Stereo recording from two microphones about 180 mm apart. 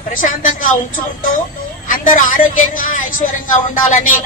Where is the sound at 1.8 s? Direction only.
50° left (ahead or behind).